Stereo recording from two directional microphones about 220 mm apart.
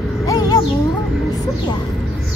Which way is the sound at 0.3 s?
15° left (ahead or behind).